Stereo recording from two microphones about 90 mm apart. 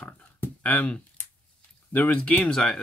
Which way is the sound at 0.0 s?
20° left (ahead or behind).